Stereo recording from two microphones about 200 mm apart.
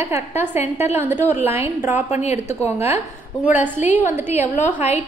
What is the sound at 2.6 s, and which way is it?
A woman's voice, 10° right (ahead or behind).